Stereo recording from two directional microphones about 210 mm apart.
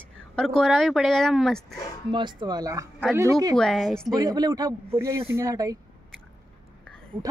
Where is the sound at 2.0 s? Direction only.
20° right (ahead or behind).